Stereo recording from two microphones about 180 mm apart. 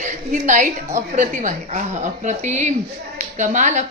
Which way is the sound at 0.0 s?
45° right (ahead or behind).